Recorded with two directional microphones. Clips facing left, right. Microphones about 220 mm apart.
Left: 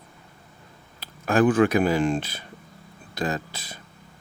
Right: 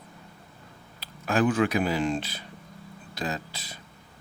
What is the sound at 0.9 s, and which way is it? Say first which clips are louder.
Speech: left 4 dB; 50° left (ahead or behind).